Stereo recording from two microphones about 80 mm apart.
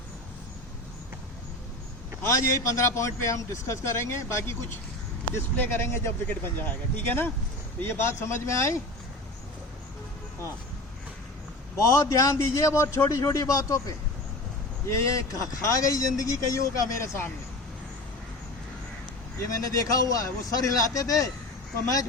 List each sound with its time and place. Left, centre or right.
2.2 s a man's voice: left
11.8 s a man's voice: left
19.4 s a man's voice: left